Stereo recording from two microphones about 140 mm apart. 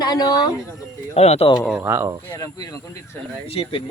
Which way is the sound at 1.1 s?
50° left (ahead or behind).